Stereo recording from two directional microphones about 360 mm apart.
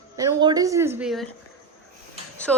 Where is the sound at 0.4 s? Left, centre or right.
Centre.